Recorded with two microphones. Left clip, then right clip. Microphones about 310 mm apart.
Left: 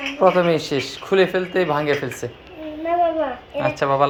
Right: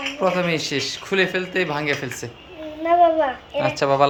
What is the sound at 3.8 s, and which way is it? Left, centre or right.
Speech, centre.